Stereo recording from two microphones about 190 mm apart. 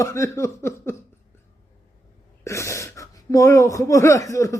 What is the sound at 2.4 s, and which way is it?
Speech, 15° left (ahead or behind).